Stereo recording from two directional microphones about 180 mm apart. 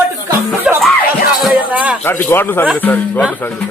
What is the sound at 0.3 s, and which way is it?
Music, 15° right (ahead or behind).